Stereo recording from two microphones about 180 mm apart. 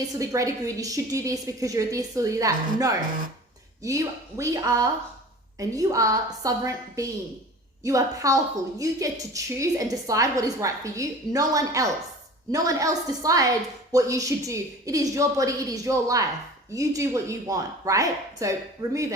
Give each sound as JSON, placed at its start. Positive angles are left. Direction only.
{"t": 0.1, "sound": "a woman's voice", "side_deg": -20}
{"t": 18.8, "sound": "speech", "side_deg": -35}